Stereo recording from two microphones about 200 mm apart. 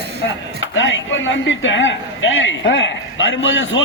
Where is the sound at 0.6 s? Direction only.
70° left (ahead or behind).